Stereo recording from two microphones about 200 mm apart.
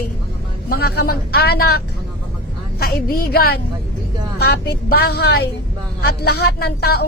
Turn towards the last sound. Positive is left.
turn(degrees=55)  # may be behind; listen again after turning